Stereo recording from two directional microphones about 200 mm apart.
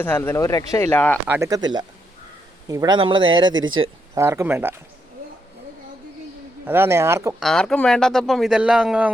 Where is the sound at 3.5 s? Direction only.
80° right.